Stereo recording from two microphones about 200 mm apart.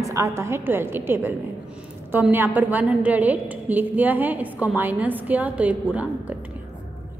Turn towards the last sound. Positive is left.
turn(degrees=-5)  # may be behind; listen again after turning